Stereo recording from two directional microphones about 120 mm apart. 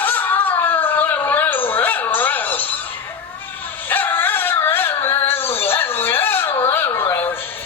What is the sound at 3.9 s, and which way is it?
Dog, 15° left (ahead or behind).